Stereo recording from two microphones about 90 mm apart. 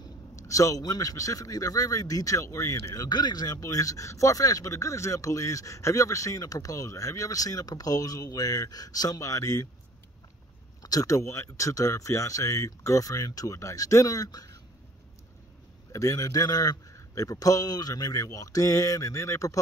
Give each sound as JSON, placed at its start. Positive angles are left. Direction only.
{"t": 0.4, "sound": "a man's voice", "side_deg": 35}
{"t": 10.8, "sound": "a man's voice", "side_deg": 45}
{"t": 15.9, "sound": "a man's voice", "side_deg": 35}